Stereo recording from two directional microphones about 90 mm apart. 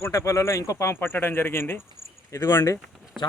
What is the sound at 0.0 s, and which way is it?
Speech, 35° left (ahead or behind).